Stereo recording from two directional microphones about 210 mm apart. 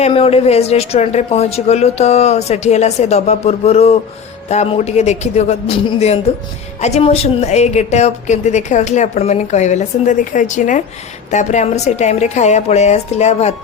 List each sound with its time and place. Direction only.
0.0 s a woman's voice: 30° left (ahead or behind)